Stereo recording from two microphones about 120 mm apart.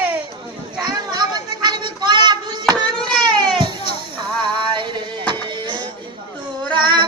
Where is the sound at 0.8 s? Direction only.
35° right (ahead or behind).